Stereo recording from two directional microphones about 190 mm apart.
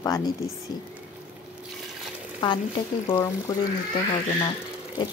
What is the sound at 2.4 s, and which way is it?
A woman's voice, 25° left (ahead or behind).